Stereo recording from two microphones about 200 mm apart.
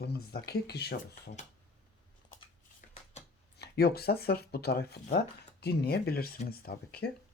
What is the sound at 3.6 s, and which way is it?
Speech, 50° left (ahead or behind).